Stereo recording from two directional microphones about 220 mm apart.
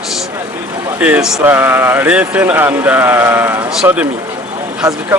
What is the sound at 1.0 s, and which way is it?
Speech, 5° right (ahead or behind).